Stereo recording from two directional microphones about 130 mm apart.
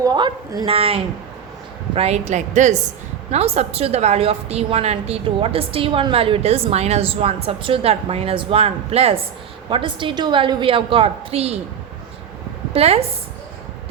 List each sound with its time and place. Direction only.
0.0 s a woman's voice: 30° right (ahead or behind)
0.7 s a woman's voice: 45° right (ahead or behind); by 2.7 s 65° right (ahead or behind)
3.3 s a woman's voice: 55° right (ahead or behind)
9.6 s a woman's voice: 40° right (ahead or behind)
12.7 s a woman's voice: 50° right (ahead or behind)